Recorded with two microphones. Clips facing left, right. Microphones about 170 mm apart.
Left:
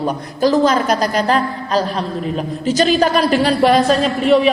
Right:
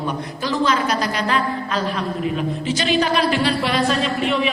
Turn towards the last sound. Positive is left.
turn(degrees=40)  # may be behind; listen again after turning